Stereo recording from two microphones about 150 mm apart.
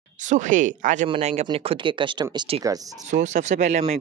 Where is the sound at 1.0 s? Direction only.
40° right (ahead or behind).